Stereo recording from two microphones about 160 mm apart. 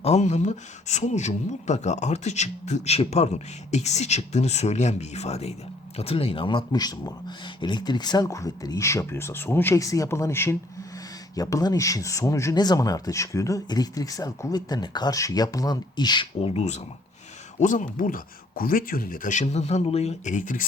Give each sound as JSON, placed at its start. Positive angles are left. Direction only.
{"t": 0.0, "sound": "speech", "side_deg": 45}
{"t": 16.6, "sound": "speech", "side_deg": 45}